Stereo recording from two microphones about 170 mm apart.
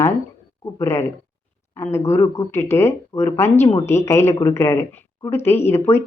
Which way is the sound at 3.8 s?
15° left (ahead or behind).